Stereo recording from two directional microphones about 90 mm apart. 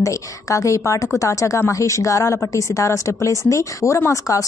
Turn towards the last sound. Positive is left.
turn(degrees=35)  # may be behind; listen again after turning